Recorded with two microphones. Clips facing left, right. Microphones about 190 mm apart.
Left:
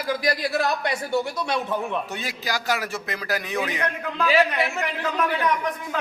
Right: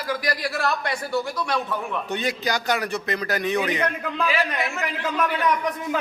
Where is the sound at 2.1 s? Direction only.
Centre (ahead or behind).